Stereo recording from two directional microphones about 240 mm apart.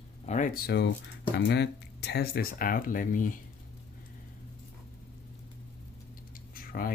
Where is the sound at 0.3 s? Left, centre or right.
Left.